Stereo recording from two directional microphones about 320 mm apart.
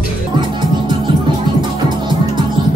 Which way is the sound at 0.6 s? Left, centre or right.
Centre.